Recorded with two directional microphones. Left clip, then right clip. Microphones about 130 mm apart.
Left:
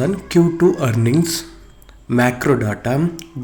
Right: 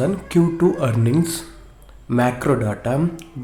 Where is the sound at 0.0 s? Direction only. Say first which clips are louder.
Left 3 dB; centre (ahead or behind).